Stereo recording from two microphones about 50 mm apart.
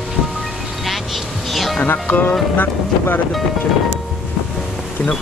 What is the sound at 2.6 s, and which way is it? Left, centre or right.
Speech, left.